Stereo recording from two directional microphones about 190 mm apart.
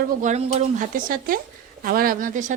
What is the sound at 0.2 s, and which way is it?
Speech, 35° right (ahead or behind).